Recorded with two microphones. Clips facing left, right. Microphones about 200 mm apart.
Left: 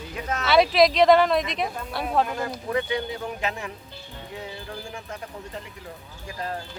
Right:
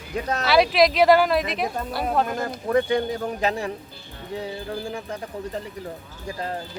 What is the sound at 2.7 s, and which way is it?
Speech, 45° right (ahead or behind).